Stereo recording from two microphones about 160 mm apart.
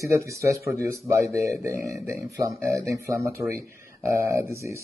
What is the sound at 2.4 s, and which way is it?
Speech, 20° right (ahead or behind).